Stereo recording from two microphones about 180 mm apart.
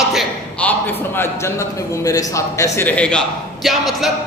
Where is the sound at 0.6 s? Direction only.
10° left (ahead or behind).